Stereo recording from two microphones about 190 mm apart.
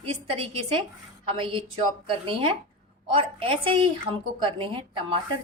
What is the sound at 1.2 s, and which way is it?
A woman's voice, 25° right (ahead or behind).